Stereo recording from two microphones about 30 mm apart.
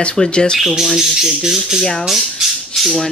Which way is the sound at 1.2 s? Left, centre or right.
Centre.